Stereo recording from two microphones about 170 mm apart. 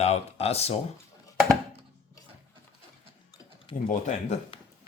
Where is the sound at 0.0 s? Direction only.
40° left (ahead or behind).